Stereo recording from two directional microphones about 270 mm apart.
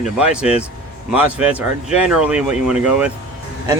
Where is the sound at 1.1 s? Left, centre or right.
Centre.